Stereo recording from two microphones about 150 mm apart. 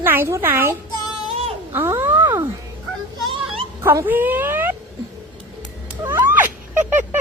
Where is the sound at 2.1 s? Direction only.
30° right (ahead or behind).